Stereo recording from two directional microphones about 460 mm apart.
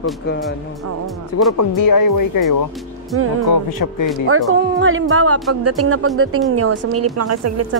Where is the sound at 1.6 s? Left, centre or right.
Left.